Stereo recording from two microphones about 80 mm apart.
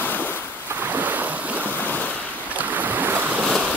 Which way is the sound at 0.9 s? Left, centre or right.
Right.